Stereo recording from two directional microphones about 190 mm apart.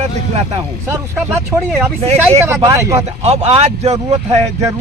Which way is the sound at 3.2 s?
35° right (ahead or behind).